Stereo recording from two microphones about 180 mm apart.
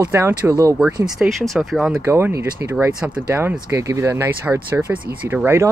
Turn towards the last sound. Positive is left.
turn(degrees=-15)  # may be behind; listen again after turning